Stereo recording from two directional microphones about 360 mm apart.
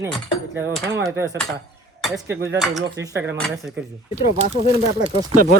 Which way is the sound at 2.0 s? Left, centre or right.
Centre.